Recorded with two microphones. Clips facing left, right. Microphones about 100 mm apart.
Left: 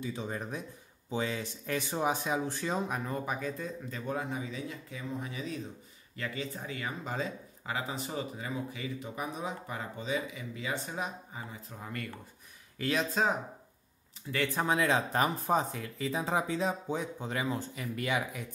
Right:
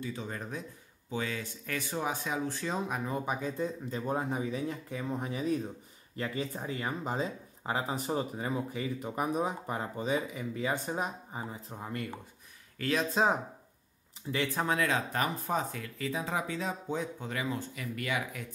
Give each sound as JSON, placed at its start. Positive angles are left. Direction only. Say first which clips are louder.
{"t": 0.0, "sound": "speech", "louder": "left 1 dB", "side_deg": 15}
{"t": 2.6, "sound": "speech", "louder": "left 1 dB", "side_deg": 0}
{"t": 3.1, "sound": "speech", "louder": "right 1 dB", "side_deg": -15}
{"t": 12.7, "sound": "speech", "louder": "even", "side_deg": 10}
{"t": 14.3, "sound": "speech", "louder": "right 2 dB", "side_deg": -20}
{"t": 14.7, "sound": "speech", "louder": "left 4 dB", "side_deg": 20}